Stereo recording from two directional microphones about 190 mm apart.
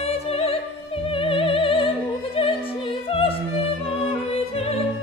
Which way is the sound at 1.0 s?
30° left (ahead or behind).